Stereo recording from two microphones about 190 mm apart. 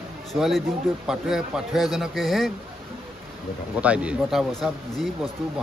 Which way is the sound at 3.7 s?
5° right (ahead or behind).